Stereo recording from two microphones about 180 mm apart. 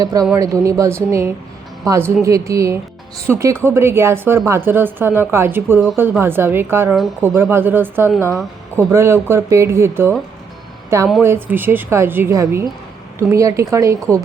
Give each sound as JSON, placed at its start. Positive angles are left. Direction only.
{"t": 0.0, "sound": "speech", "side_deg": -20}
{"t": 11.2, "sound": "speech", "side_deg": -10}